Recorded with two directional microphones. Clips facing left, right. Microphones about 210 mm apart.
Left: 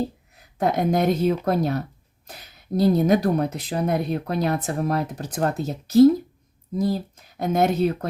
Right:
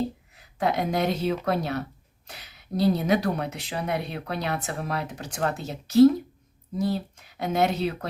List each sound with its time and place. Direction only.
0.6 s speech: 45° left (ahead or behind)